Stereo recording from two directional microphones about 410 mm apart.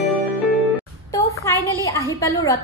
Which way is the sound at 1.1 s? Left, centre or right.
Centre.